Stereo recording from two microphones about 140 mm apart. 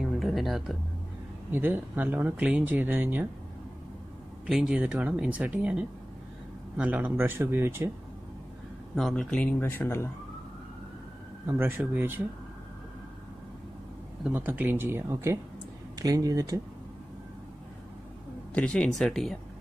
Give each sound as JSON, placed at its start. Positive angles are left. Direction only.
{"t": 0.0, "sound": "music", "side_deg": 0}
{"t": 1.5, "sound": "speech", "side_deg": -15}
{"t": 4.5, "sound": "speech", "side_deg": -5}
{"t": 8.9, "sound": "speech", "side_deg": 5}
{"t": 11.4, "sound": "speech", "side_deg": -15}
{"t": 14.2, "sound": "speech", "side_deg": -10}
{"t": 18.5, "sound": "speech", "side_deg": 10}